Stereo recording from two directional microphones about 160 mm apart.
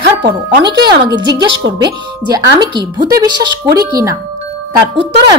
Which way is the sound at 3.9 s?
20° right (ahead or behind).